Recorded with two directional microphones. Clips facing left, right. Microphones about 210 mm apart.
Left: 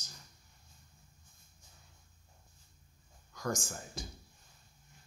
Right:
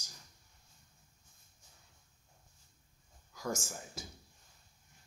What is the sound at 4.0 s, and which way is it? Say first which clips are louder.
Speech: left 3 dB; 5° right (ahead or behind).